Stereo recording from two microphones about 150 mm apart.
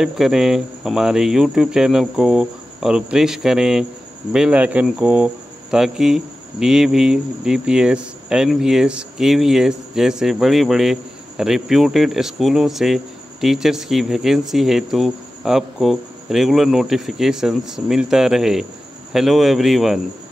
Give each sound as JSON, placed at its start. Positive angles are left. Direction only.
{"t": 0.0, "sound": "speech", "side_deg": -5}